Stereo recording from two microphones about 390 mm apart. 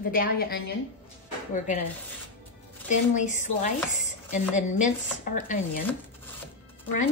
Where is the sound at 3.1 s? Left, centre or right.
Centre.